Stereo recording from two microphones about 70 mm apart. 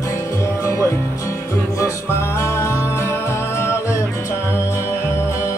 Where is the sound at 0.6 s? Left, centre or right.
Left.